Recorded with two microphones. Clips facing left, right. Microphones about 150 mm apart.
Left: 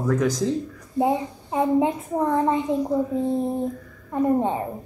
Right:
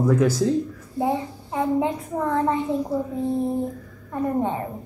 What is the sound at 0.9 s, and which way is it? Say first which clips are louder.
Speech: left 2 dB; 20° left (ahead or behind).